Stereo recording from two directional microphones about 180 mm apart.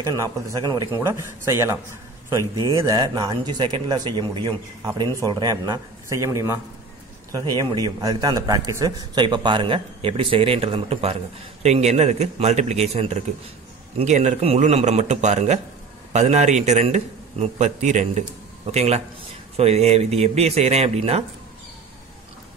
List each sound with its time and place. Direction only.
0.0 s a man's voice: 20° right (ahead or behind); by 21.2 s 35° right (ahead or behind)